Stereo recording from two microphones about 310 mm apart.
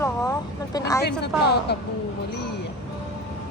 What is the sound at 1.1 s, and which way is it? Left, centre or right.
Speech, left.